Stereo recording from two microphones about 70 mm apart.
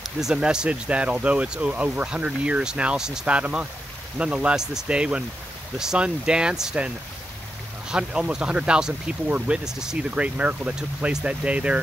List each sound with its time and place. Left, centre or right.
0.0 s speech: centre
7.9 s speech: centre